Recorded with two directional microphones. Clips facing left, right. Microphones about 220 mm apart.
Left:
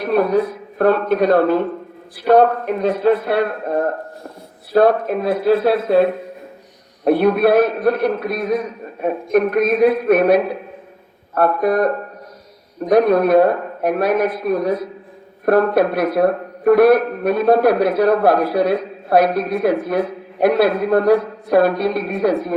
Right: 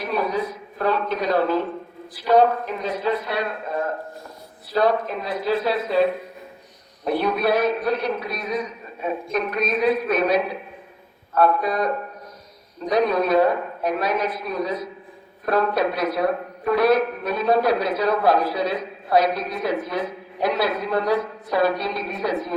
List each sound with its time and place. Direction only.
0.0 s a man's voice: 55° left (ahead or behind)